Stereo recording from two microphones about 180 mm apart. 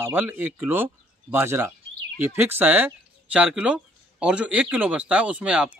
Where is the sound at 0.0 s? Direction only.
10° right (ahead or behind).